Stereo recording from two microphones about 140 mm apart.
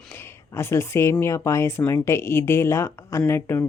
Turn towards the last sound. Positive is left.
turn(degrees=15)  # may be behind; listen again after turning